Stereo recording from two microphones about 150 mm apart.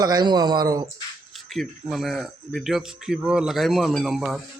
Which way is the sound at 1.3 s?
Centre (ahead or behind).